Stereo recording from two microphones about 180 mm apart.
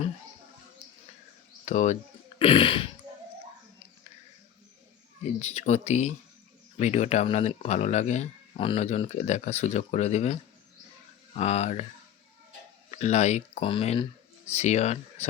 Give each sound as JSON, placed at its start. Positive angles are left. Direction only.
{"t": 1.6, "sound": "speech", "side_deg": 40}
{"t": 2.4, "sound": "a sound", "side_deg": 30}
{"t": 5.2, "sound": "speech", "side_deg": 35}
{"t": 11.3, "sound": "speech", "side_deg": 35}
{"t": 12.9, "sound": "speech", "side_deg": 40}